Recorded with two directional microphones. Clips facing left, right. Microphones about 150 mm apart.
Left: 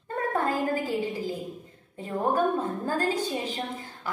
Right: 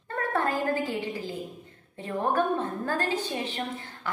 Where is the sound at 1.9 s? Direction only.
10° left (ahead or behind).